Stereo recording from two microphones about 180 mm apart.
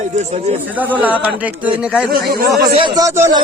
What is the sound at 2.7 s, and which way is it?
Speech, 25° right (ahead or behind).